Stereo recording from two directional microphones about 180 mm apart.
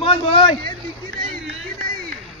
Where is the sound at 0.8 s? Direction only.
30° right (ahead or behind).